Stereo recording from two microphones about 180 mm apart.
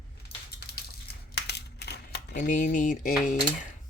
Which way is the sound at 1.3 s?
65° left (ahead or behind).